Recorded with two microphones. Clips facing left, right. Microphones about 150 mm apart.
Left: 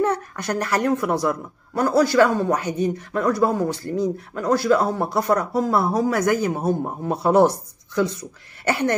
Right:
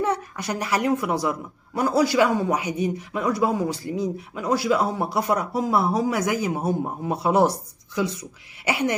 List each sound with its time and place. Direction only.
0.0 s a woman's voice: 5° right (ahead or behind)